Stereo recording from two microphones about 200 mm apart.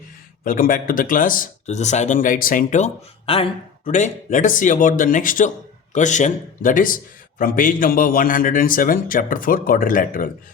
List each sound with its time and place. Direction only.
0.4 s a man's voice: 45° left (ahead or behind)